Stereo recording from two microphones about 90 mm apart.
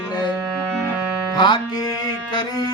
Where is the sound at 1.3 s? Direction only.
65° left (ahead or behind).